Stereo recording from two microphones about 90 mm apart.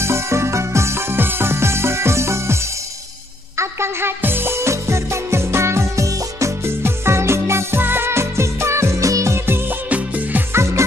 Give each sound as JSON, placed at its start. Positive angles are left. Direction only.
{"t": 0.0, "sound": "music", "side_deg": -30}
{"t": 9.8, "sound": "music", "side_deg": -15}
{"t": 10.5, "sound": "music", "side_deg": -30}